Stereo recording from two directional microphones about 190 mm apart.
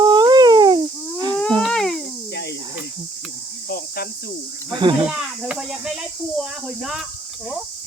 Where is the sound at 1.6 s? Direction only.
Centre (ahead or behind).